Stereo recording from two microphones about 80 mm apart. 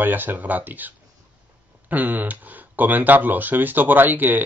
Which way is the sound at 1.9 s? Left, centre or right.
Right.